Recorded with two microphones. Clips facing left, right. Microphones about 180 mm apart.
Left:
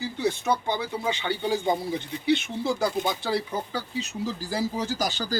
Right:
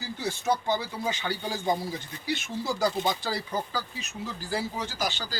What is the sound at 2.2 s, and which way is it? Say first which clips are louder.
Speech: left 6 dB; 60° left (ahead or behind).